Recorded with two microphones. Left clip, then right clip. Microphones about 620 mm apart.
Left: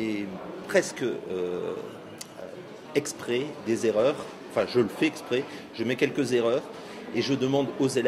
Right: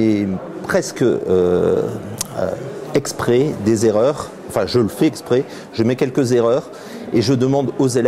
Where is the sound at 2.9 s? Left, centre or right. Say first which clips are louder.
Right 12 dB; right.